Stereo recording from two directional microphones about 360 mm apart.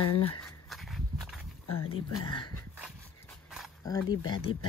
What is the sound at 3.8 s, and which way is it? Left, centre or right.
Speech, centre.